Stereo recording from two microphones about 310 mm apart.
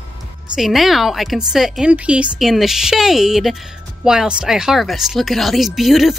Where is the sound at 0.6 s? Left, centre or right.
Centre.